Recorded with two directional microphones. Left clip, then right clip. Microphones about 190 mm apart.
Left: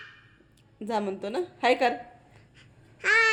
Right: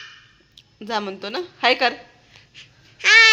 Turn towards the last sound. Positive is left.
turn(degrees=25)  # may be behind; listen again after turning